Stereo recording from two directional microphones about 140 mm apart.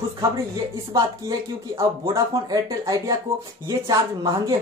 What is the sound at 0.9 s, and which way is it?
Speech, 25° right (ahead or behind).